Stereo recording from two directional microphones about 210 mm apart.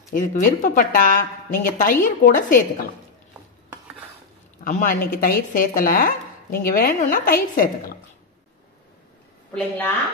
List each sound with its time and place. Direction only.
0.1 s a woman's voice: 35° left (ahead or behind)
4.6 s speech: 45° left (ahead or behind)
9.5 s a woman's voice: 5° left (ahead or behind)